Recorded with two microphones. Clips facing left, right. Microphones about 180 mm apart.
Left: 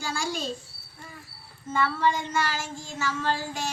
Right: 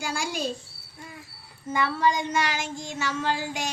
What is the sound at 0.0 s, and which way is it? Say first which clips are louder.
Speech: right 1 dB; 15° right (ahead or behind).